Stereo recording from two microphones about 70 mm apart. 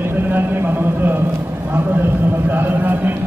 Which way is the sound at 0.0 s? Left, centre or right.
Right.